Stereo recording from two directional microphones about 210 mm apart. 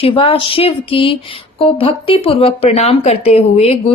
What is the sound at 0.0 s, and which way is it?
A woman's voice, 25° left (ahead or behind).